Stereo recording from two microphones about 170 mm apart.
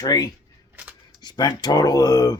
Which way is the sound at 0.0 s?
20° left (ahead or behind).